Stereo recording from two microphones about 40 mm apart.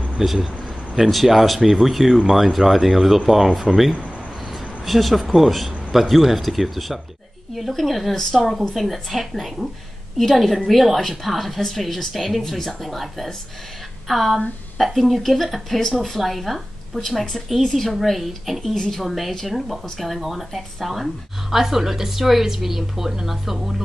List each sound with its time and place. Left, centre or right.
0.2 s a man's voice: centre